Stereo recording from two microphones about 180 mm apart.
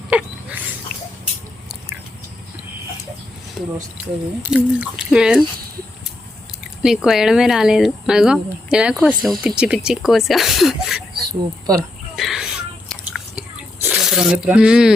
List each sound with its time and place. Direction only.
0.1 s a sound: 5° right (ahead or behind)
3.6 s speech: centre (ahead or behind)
6.8 s speech: centre (ahead or behind)
11.3 s speech: 20° right (ahead or behind)
11.8 s a sound: centre (ahead or behind)
13.8 s speech: centre (ahead or behind)